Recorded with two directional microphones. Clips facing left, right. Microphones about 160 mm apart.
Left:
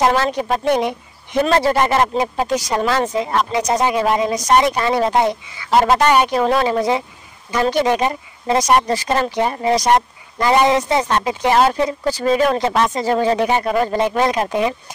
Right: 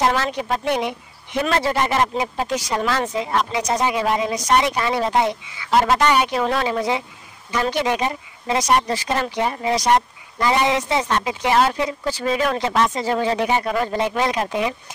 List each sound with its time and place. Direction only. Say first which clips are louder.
0.0 s speech: left 4 dB; 45° left (ahead or behind)